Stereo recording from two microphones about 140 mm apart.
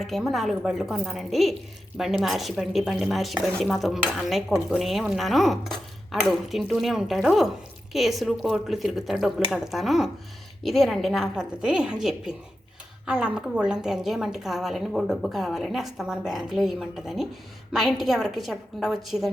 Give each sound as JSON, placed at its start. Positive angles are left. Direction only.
{"t": 0.0, "sound": "a woman's voice", "side_deg": 0}